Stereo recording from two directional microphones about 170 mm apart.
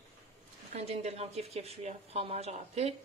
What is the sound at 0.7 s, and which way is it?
Speech, 40° right (ahead or behind).